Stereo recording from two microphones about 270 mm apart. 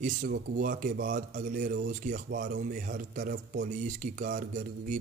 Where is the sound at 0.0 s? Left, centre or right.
Right.